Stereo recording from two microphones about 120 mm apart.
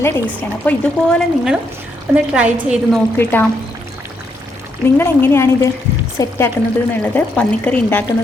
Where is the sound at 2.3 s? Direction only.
10° right (ahead or behind).